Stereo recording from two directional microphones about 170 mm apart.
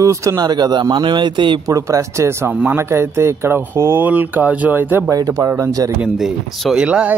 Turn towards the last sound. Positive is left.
turn(degrees=-5)  # may be behind; listen again after turning